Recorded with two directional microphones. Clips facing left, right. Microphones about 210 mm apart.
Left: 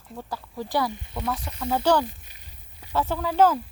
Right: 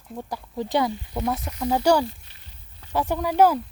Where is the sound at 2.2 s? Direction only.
10° left (ahead or behind).